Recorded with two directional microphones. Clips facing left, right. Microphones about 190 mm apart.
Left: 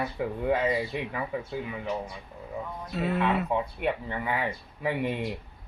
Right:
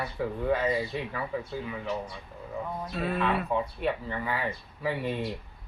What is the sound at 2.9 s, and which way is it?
Speech, 20° left (ahead or behind).